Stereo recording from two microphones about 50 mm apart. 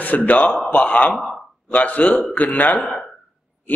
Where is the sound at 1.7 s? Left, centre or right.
Left.